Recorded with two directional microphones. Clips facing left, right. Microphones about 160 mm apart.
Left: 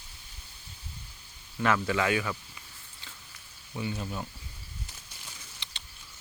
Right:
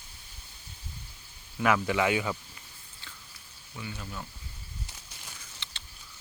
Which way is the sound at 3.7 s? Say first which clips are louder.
Left 6 dB; 25° left (ahead or behind).